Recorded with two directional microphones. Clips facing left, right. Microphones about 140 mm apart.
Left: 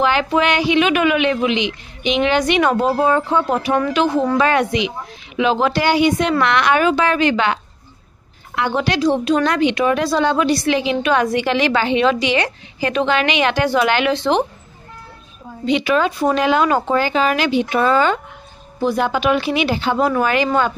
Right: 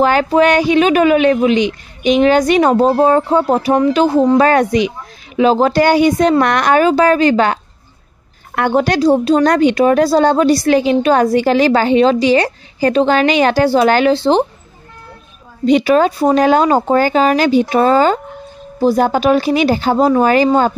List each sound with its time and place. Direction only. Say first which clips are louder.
0.0 s a woman's voice: right 5 dB; 40° right (ahead or behind)
15.6 s a woman's voice: right 6 dB; 40° right (ahead or behind)